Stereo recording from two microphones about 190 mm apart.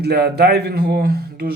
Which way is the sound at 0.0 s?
60° right (ahead or behind).